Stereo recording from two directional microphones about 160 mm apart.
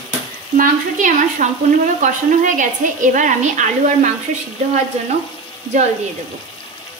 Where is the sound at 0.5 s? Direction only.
55° right (ahead or behind).